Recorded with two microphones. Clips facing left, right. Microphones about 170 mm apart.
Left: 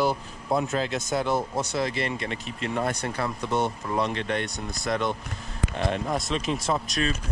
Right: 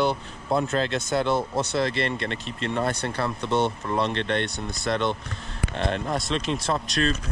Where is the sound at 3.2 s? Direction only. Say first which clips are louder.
Right 2 dB; centre (ahead or behind).